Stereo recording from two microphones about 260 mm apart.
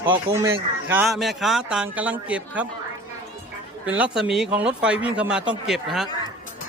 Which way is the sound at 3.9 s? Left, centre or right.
Centre.